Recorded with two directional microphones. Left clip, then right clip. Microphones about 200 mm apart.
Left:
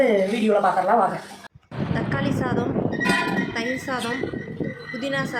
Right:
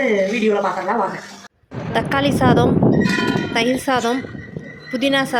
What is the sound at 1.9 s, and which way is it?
A woman's voice, 45° right (ahead or behind).